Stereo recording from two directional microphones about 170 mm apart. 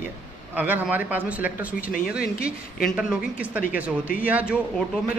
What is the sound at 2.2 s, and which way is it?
Speech, 65° left (ahead or behind).